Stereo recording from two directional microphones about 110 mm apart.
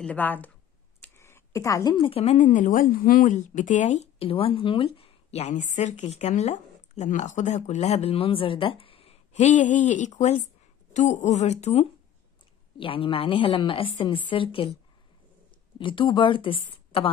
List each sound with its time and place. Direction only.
0.0 s speech: 15° left (ahead or behind)
1.0 s a sound: 20° left (ahead or behind)
2.0 s speech: 60° left (ahead or behind)
3.3 s speech: 90° left
12.7 s a woman's voice: 55° left (ahead or behind)
15.8 s a woman's voice: 50° left (ahead or behind)